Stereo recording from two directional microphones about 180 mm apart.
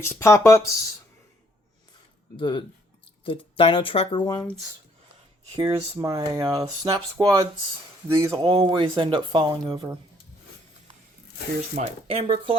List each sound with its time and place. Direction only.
0.0 s speech: 15° left (ahead or behind)
2.3 s speech: 25° left (ahead or behind)
5.5 s speech: 20° right (ahead or behind)
11.7 s speech: 35° right (ahead or behind)